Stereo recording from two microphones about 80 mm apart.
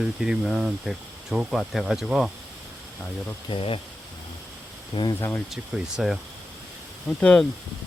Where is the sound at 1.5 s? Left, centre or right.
Centre.